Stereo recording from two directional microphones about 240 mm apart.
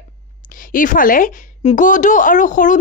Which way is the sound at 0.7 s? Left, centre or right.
Left.